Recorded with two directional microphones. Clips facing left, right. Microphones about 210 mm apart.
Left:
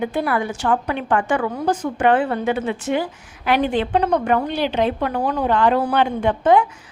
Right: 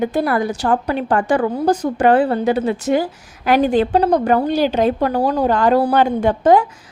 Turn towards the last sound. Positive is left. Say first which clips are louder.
# right 3 dB
turn(degrees=-40)  # may be behind; listen again after turning